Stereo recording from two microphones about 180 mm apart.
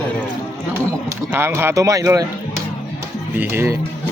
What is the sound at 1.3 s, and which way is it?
Speech, 15° right (ahead or behind).